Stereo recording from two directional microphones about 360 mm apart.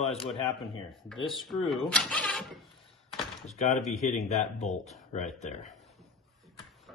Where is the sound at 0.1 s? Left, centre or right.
Centre.